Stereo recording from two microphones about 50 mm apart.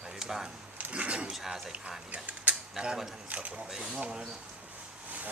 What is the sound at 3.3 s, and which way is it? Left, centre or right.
Speech, right.